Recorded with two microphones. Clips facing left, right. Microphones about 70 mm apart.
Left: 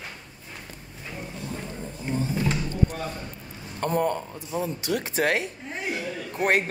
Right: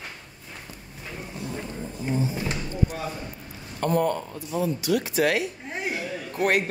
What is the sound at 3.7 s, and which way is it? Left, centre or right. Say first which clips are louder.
A man's voice: right 1 dB; left.